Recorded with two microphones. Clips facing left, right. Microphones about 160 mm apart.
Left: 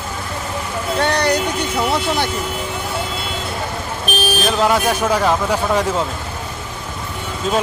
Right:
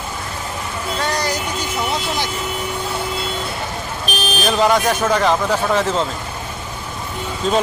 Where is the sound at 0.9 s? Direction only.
65° left (ahead or behind).